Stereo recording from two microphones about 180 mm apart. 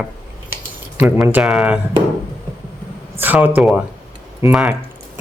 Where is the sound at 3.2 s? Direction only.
10° right (ahead or behind).